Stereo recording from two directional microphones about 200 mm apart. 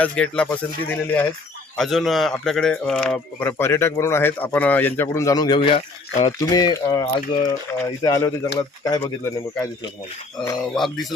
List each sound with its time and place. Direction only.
0.0 s speech: 5° left (ahead or behind)
10.8 s speech: centre (ahead or behind)